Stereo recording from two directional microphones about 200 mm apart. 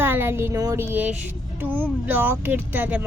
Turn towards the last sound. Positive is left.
turn(degrees=-10)  # may be behind; listen again after turning